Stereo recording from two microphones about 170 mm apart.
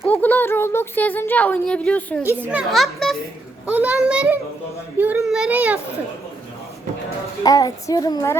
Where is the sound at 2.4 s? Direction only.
10° right (ahead or behind).